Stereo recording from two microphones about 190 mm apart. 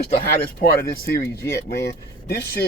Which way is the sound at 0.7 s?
50° left (ahead or behind).